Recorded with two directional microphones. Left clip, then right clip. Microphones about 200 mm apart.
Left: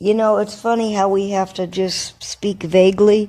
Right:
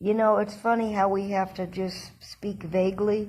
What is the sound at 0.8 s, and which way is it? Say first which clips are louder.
Speech: left 7 dB; 45° left (ahead or behind).